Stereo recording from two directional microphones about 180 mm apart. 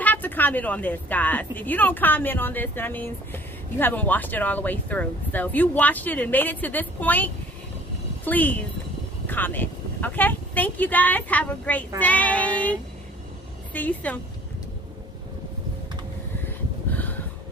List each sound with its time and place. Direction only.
0.0 s a woman's voice: 10° left (ahead or behind)
8.3 s a woman's voice: 10° left (ahead or behind)
13.7 s a woman's voice: 10° left (ahead or behind)
16.4 s gasp: 10° left (ahead or behind)